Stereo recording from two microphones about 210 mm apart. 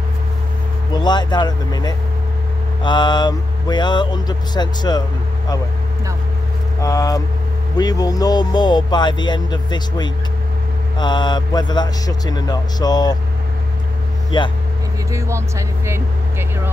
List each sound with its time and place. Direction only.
0.9 s speech: 20° left (ahead or behind)
6.8 s speech: 15° left (ahead or behind)
14.3 s speech: 20° left (ahead or behind)
15.0 s speech: 15° right (ahead or behind)